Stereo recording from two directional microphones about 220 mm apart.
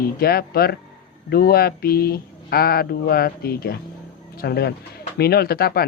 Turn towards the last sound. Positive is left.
turn(degrees=45)  # may be behind; listen again after turning